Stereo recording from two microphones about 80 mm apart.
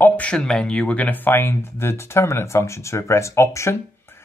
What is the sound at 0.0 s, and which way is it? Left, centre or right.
Speech, centre.